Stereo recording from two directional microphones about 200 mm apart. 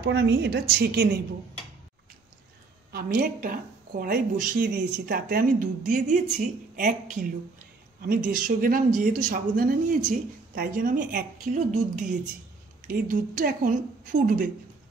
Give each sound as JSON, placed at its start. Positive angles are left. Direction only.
{"t": 0.0, "sound": "a woman's voice", "side_deg": -55}
{"t": 2.9, "sound": "speech", "side_deg": -45}
{"t": 4.6, "sound": "a woman's voice", "side_deg": -60}